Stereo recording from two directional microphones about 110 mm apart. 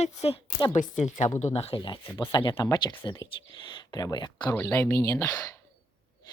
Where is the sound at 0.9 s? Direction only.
90° left.